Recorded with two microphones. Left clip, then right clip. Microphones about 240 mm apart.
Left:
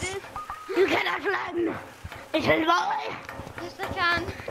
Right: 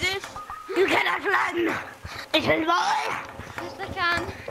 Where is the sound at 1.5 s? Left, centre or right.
Right.